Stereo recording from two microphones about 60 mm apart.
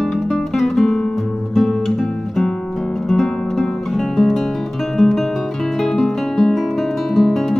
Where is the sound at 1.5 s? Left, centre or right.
Centre.